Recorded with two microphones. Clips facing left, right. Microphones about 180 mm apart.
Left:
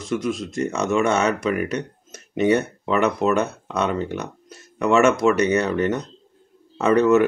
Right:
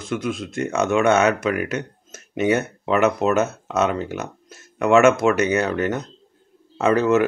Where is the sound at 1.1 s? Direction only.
30° left (ahead or behind).